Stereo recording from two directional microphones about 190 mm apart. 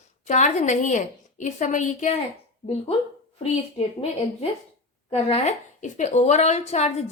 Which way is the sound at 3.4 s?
35° left (ahead or behind).